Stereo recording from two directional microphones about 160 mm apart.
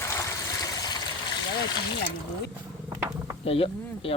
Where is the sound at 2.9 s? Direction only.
20° right (ahead or behind).